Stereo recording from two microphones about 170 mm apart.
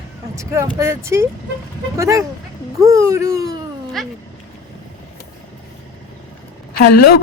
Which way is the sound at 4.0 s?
Centre (ahead or behind).